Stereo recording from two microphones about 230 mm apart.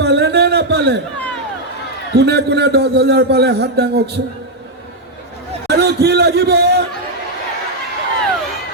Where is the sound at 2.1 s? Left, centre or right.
Right.